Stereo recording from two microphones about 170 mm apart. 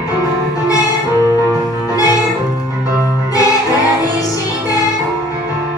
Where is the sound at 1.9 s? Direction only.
20° left (ahead or behind).